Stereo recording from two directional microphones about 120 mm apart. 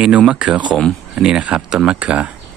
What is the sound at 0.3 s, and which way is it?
Speech, 10° right (ahead or behind).